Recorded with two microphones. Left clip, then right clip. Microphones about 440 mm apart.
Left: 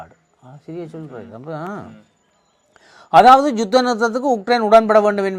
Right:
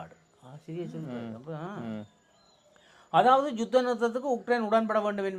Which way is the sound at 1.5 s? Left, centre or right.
Left.